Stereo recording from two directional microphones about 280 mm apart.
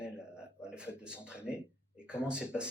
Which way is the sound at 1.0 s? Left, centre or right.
Centre.